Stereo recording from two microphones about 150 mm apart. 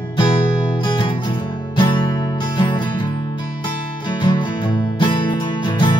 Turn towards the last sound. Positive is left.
turn(degrees=35)  # may be behind; listen again after turning